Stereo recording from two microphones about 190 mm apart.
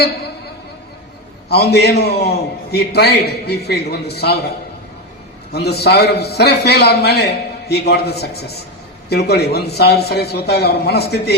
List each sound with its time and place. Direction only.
1.5 s a man's voice: 60° left (ahead or behind)
5.5 s a man's voice: 60° left (ahead or behind)